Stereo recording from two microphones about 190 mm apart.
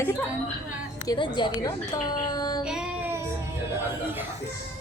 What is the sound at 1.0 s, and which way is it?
A woman's voice, 25° left (ahead or behind).